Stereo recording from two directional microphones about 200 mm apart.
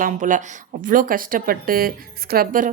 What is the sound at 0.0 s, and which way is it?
A woman's voice, 40° right (ahead or behind).